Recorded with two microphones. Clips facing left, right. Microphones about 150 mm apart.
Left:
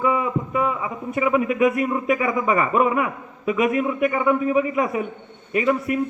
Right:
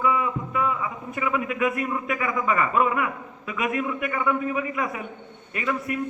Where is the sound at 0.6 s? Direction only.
25° left (ahead or behind).